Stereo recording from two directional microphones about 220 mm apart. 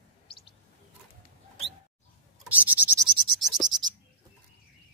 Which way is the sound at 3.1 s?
20° right (ahead or behind).